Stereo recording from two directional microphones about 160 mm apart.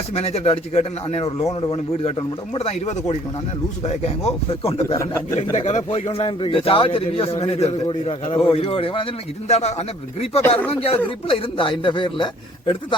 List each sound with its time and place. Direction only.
0.1 s a man's voice: 40° left (ahead or behind)
1.5 s a man's voice: 25° left (ahead or behind)
2.0 s a man's voice: 40° left (ahead or behind)